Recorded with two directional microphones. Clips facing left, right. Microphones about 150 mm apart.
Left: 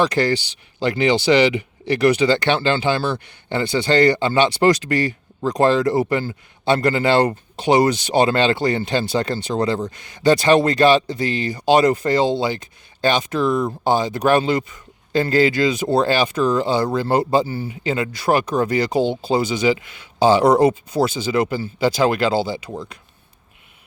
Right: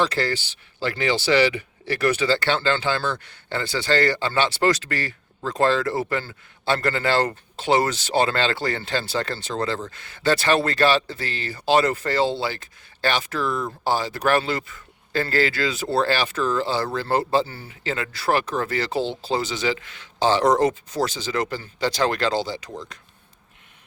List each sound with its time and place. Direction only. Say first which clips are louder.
0.0 s speech: left 5 dB; 15° left (ahead or behind)